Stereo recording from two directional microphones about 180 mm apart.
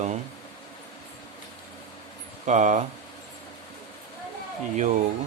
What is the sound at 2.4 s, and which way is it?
Speech, 40° right (ahead or behind).